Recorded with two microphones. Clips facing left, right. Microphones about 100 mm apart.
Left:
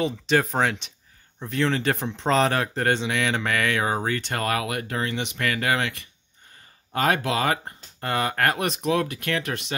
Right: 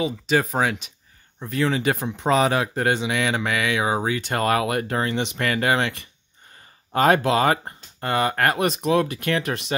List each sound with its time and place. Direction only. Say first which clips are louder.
0.0 s speech: right 1 dB; 5° right (ahead or behind)
4.3 s speech: right 5 dB; 30° right (ahead or behind)
8.0 s speech: right 2 dB; 5° right (ahead or behind)